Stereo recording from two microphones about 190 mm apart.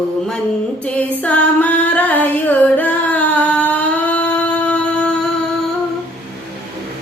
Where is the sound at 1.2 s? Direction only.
10° left (ahead or behind).